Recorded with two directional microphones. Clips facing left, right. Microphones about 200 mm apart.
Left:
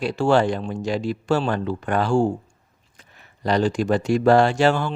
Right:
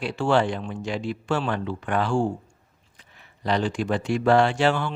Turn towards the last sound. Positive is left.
turn(degrees=40)  # may be behind; listen again after turning